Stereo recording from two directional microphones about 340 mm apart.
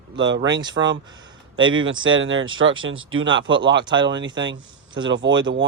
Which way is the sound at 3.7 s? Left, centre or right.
Centre.